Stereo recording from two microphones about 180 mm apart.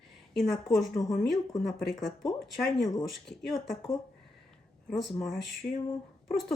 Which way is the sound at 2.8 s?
20° left (ahead or behind).